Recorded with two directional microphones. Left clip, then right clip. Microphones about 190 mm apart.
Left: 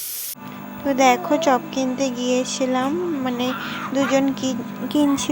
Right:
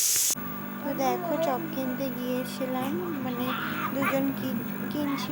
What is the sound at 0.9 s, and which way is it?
A woman's voice, 35° left (ahead or behind).